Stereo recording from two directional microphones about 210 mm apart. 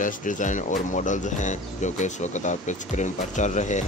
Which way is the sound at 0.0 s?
40° left (ahead or behind).